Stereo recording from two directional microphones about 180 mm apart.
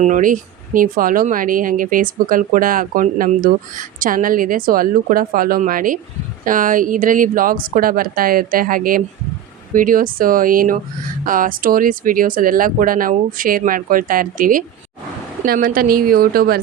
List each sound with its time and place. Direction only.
0.0 s speech: 45° right (ahead or behind)